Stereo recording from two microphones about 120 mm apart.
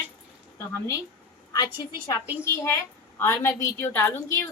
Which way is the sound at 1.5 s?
35° left (ahead or behind).